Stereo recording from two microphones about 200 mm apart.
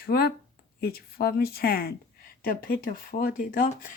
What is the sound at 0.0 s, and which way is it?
Speech, 50° left (ahead or behind).